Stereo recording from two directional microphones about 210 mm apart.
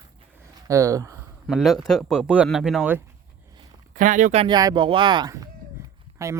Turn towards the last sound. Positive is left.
turn(degrees=-15)  # may be behind; listen again after turning